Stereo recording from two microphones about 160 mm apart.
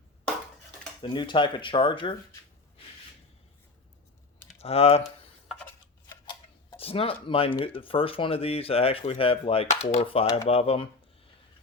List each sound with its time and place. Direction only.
1.0 s speech: 30° left (ahead or behind)
4.6 s speech: 40° left (ahead or behind)
5.5 s a sound: 10° left (ahead or behind)
6.2 s speech: 35° left (ahead or behind)